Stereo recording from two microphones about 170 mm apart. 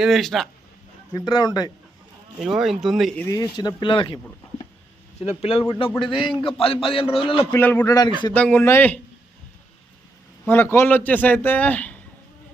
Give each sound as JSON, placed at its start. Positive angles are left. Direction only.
{"t": 0.0, "sound": "speech", "side_deg": 0}
{"t": 1.1, "sound": "speech", "side_deg": 25}
{"t": 2.4, "sound": "speech", "side_deg": 0}
{"t": 3.2, "sound": "a man's voice", "side_deg": 20}
{"t": 7.5, "sound": "a man's voice", "side_deg": 10}
{"t": 7.9, "sound": "speech", "side_deg": 25}
{"t": 8.3, "sound": "a man's voice", "side_deg": 10}
{"t": 10.4, "sound": "a man's voice", "side_deg": 10}